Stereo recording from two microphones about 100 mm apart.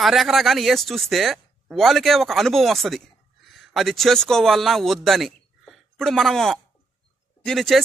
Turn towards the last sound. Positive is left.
turn(degrees=0)  # may be behind; listen again after turning